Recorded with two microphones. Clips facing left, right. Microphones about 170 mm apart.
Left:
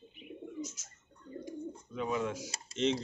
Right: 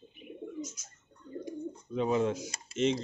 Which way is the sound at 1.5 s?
25° right (ahead or behind).